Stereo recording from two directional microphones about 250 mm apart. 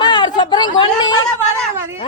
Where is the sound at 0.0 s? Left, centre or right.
Centre.